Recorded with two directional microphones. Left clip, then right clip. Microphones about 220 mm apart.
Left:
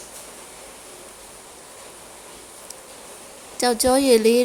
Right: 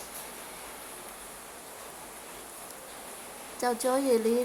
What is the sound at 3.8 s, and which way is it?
Speech, 65° left (ahead or behind).